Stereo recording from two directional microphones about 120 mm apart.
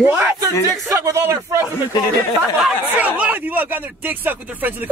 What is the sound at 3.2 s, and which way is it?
Speech, 15° right (ahead or behind).